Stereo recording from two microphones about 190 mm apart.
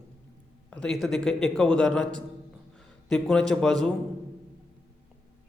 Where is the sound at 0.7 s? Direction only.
5° left (ahead or behind).